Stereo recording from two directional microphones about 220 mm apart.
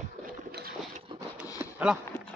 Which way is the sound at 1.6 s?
5° right (ahead or behind).